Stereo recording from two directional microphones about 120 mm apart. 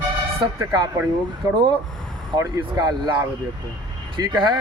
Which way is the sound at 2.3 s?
25° right (ahead or behind).